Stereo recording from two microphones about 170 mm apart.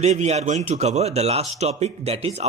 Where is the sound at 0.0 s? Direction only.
40° right (ahead or behind).